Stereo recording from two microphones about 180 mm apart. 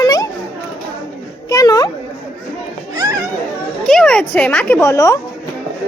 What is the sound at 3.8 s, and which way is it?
Speech, 5° left (ahead or behind).